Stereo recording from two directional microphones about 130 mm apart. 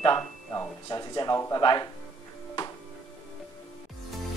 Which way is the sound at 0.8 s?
30° left (ahead or behind).